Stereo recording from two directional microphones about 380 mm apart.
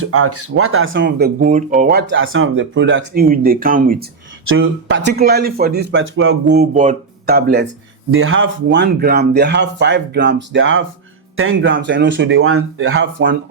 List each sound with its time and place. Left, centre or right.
0.0 s speech: right
4.4 s speech: right